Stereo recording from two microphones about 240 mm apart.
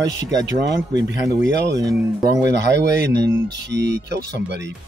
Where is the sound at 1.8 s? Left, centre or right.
Centre.